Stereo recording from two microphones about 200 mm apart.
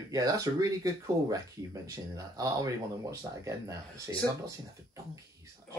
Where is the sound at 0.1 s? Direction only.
15° right (ahead or behind).